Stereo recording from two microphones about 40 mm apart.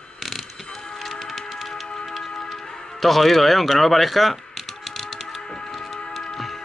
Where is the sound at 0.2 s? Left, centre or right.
Centre.